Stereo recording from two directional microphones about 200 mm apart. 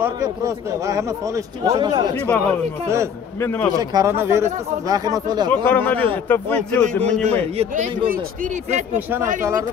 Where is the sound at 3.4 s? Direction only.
10° left (ahead or behind).